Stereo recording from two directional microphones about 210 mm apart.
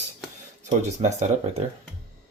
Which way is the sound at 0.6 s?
35° right (ahead or behind).